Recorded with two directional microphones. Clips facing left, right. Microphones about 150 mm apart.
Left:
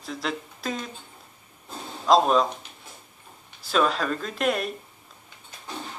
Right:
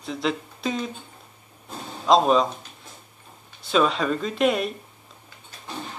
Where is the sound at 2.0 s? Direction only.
Centre (ahead or behind).